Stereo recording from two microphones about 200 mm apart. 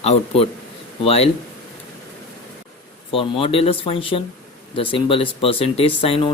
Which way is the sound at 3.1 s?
25° left (ahead or behind).